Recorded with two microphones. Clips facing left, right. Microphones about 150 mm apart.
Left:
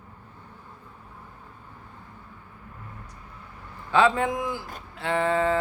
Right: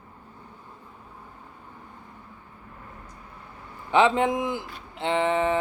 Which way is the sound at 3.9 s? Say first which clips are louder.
Right 1 dB; 20° right (ahead or behind).